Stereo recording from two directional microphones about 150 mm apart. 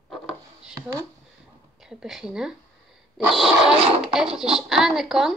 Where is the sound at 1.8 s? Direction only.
5° right (ahead or behind).